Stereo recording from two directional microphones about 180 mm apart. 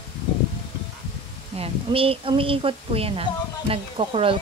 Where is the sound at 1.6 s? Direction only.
30° right (ahead or behind).